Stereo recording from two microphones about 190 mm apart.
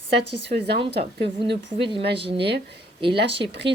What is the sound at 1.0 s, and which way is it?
Speech, 30° right (ahead or behind).